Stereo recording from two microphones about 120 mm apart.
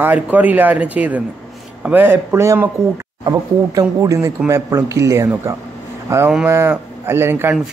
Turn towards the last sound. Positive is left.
turn(degrees=-20)  # may be behind; listen again after turning